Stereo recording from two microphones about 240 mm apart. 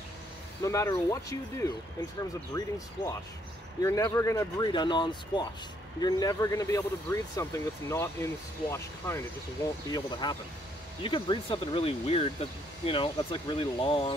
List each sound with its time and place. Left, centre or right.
0.7 s speech: centre
3.8 s speech: centre